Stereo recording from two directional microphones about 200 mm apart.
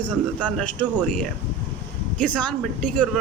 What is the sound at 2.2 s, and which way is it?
Speech, 5° left (ahead or behind).